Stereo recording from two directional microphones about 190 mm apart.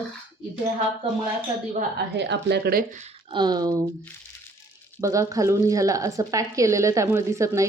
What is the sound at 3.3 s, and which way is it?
Speech, 25° right (ahead or behind).